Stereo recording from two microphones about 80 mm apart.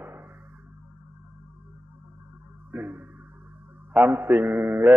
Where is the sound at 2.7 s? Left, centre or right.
Right.